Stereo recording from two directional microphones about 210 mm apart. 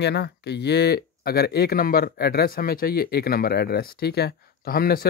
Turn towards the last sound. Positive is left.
turn(degrees=45)  # may be behind; listen again after turning